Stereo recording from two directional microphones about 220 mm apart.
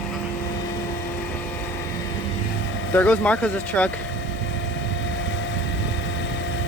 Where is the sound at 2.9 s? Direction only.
5° left (ahead or behind).